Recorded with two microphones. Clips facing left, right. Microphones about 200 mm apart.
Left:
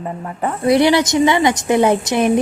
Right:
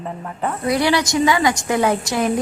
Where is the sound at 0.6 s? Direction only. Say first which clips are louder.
Left 6 dB; 25° left (ahead or behind).